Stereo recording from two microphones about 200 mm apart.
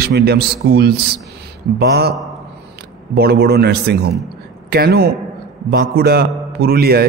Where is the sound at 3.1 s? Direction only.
50° right (ahead or behind).